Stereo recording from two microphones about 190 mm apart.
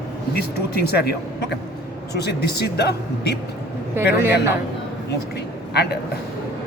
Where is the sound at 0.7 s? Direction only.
55° left (ahead or behind).